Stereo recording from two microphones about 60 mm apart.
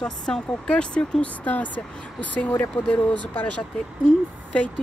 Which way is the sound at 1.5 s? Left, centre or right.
Left.